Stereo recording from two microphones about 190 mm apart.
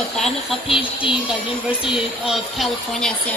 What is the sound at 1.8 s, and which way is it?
Speech, 5° right (ahead or behind).